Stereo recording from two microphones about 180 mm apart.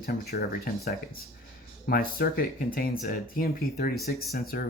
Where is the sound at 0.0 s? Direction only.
60° left (ahead or behind).